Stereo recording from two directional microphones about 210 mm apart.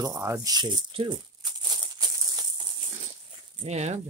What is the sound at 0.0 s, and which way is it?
Crumpling, 15° right (ahead or behind).